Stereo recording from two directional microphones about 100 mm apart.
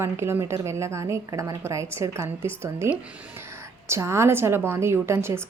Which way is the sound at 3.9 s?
25° right (ahead or behind).